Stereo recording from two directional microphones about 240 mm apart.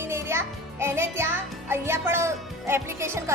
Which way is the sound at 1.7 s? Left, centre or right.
Centre.